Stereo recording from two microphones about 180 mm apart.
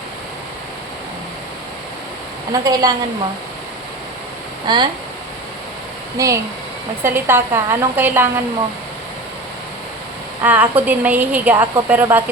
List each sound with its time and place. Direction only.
2.5 s a woman's voice: 20° right (ahead or behind)
4.6 s a woman's voice: 25° right (ahead or behind)
6.1 s a woman's voice: 15° right (ahead or behind)
10.4 s a woman's voice: 10° right (ahead or behind)